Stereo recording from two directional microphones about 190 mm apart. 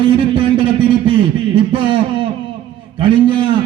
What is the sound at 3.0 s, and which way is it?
Speech, 25° right (ahead or behind).